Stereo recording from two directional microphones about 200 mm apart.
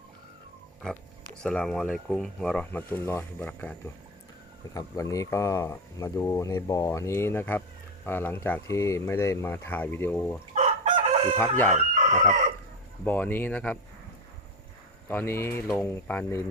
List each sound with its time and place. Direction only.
1.4 s speech: 5° left (ahead or behind)
10.5 s chicken: 35° right (ahead or behind)
11.3 s speech: 10° left (ahead or behind)
11.7 s chicken: 40° right (ahead or behind)
13.1 s speech: 10° left (ahead or behind)
15.0 s speech: 10° left (ahead or behind)